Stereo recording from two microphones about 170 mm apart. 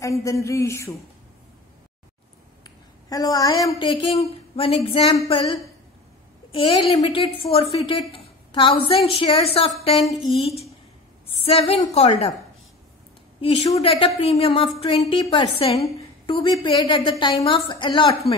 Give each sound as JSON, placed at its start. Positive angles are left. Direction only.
{"t": 0.0, "sound": "a sound", "side_deg": 20}
{"t": 2.6, "sound": "a woman's voice", "side_deg": 20}
{"t": 6.5, "sound": "a woman's voice", "side_deg": 35}
{"t": 13.4, "sound": "a woman's voice", "side_deg": 30}